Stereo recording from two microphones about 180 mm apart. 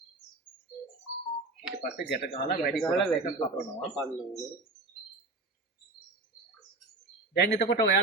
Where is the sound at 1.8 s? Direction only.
60° left (ahead or behind).